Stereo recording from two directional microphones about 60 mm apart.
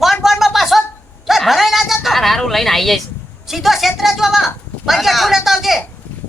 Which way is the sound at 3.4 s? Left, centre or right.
Centre.